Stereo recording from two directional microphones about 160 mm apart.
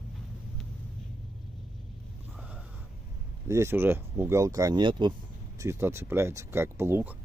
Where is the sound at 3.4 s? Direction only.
15° right (ahead or behind).